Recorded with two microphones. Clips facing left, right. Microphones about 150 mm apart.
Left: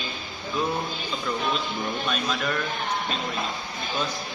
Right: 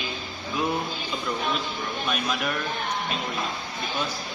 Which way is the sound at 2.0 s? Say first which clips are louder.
Right 3 dB; 10° right (ahead or behind).